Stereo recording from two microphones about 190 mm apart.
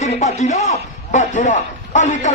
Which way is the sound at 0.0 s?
40° left (ahead or behind).